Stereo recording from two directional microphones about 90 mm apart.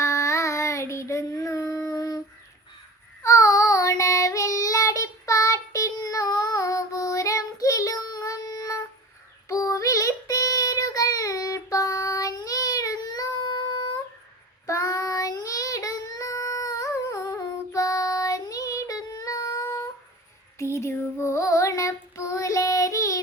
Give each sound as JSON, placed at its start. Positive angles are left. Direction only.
{"t": 0.0, "sound": "child singing", "side_deg": 35}
{"t": 3.2, "sound": "child singing", "side_deg": 35}
{"t": 20.6, "sound": "child singing", "side_deg": 30}